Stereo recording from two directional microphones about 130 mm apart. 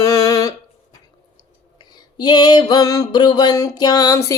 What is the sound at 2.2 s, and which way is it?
Music, 30° left (ahead or behind).